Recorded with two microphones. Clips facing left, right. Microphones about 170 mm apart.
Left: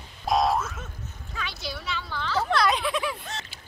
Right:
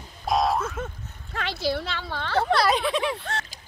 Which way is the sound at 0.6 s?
60° right (ahead or behind).